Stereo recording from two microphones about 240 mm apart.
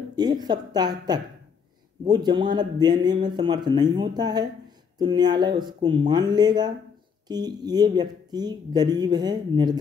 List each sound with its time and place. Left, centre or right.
0.1 s a woman's voice: centre